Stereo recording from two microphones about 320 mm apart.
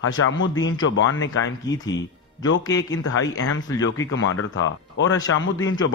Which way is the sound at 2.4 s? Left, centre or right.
Left.